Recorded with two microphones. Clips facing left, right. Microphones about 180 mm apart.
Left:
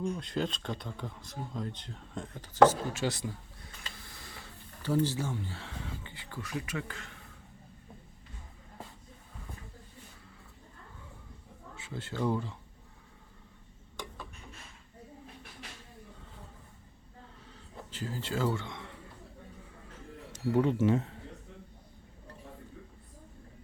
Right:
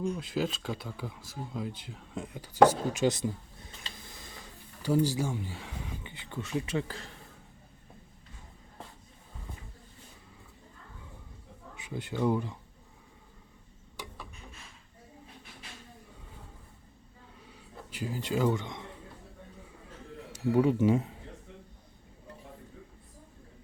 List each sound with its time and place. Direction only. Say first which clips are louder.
0.0 s speech: right 2 dB; 5° right (ahead or behind); by 7.2 s 35° right (ahead or behind)
11.7 s speech: right 3 dB; 15° right (ahead or behind)
17.9 s speech: right 3 dB; 15° right (ahead or behind)
20.3 s speech: right 2 dB; 10° right (ahead or behind)